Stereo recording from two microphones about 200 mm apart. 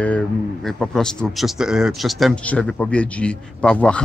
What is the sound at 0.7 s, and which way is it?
Speech, centre (ahead or behind).